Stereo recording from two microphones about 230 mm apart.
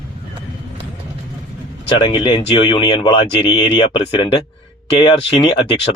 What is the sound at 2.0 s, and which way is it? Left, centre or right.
Speech, centre.